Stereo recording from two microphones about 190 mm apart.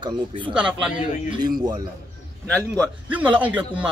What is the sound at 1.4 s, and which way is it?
Speech, 20° right (ahead or behind).